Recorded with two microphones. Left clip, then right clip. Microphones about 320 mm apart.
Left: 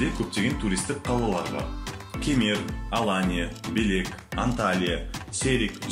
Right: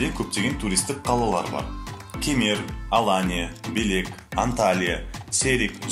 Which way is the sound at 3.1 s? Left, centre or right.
Centre.